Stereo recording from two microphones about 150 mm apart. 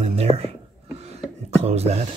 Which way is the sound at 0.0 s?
45° right (ahead or behind).